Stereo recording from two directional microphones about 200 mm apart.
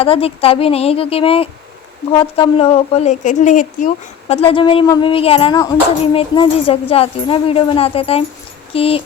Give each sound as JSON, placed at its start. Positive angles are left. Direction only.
{"t": 0.0, "sound": "speech", "side_deg": 30}